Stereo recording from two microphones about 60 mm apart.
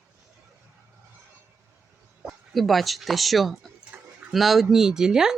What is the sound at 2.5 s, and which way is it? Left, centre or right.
Speech, centre.